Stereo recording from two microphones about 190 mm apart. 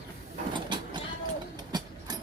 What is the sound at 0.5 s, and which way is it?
Vehicle, 25° right (ahead or behind).